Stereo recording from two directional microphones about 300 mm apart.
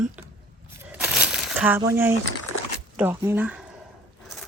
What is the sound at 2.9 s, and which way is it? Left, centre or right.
Speech, centre.